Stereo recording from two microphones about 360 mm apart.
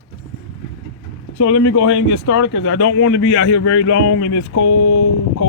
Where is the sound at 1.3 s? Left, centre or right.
Left.